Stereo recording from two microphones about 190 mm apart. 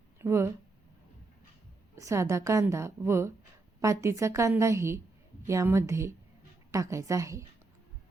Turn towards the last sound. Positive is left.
turn(degrees=-15)  # may be behind; listen again after turning